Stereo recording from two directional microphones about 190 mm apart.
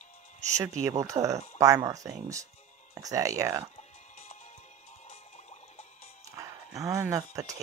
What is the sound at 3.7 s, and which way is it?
Music, 35° left (ahead or behind).